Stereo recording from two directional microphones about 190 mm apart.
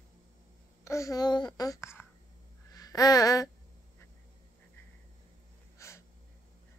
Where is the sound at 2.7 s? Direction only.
20° left (ahead or behind).